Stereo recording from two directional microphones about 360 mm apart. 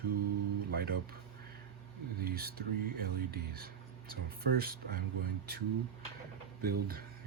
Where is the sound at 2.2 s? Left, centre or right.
Right.